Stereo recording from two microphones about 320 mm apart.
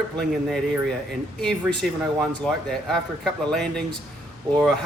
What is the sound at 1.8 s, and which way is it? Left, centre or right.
Speech, centre.